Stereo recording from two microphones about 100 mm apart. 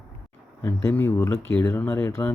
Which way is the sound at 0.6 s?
25° left (ahead or behind).